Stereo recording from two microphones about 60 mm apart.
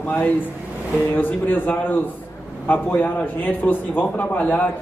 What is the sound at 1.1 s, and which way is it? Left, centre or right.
A man's voice, left.